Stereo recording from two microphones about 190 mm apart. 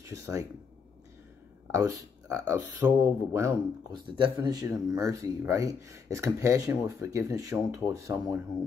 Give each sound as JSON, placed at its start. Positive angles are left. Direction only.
{"t": 0.0, "sound": "speech", "side_deg": -15}
{"t": 1.7, "sound": "speech", "side_deg": -15}